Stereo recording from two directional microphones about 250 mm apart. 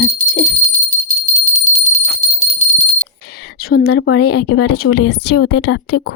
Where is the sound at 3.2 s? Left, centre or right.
Left.